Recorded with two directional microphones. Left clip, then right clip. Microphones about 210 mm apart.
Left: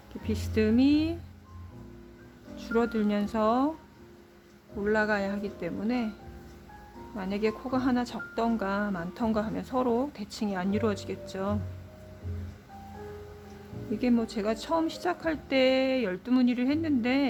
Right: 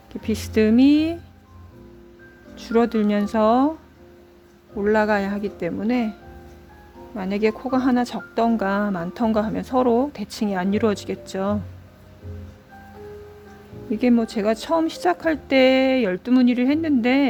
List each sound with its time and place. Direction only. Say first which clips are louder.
0.1 s speech: right 8 dB; 35° right (ahead or behind)
2.6 s a woman's voice: right 8 dB; 30° right (ahead or behind)
4.8 s a woman's voice: right 8 dB; 35° right (ahead or behind)
7.2 s a woman's voice: right 8 dB; 35° right (ahead or behind)
14.0 s a woman's voice: right 8 dB; 30° right (ahead or behind)